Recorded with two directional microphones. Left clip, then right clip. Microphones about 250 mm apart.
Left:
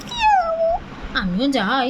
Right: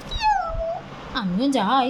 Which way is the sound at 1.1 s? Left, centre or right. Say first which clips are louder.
Left 2 dB; centre.